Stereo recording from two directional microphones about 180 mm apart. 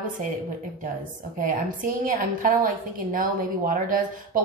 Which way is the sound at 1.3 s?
50° right (ahead or behind).